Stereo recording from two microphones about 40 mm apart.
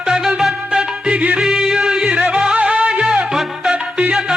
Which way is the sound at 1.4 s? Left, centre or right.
Centre.